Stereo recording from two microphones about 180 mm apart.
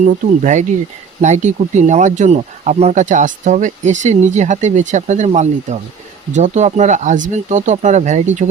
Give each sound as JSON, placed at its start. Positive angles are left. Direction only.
{"t": 0.0, "sound": "speech", "side_deg": -40}